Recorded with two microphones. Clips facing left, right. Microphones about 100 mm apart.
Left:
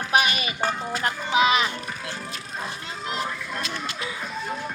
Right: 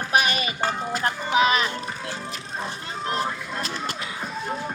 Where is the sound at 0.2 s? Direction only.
35° right (ahead or behind).